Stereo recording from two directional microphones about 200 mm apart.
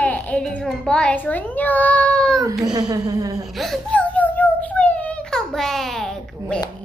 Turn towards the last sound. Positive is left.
turn(degrees=0)  # may be behind; listen again after turning